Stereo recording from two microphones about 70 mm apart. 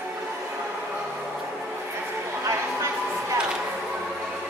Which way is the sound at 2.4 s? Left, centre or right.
Right.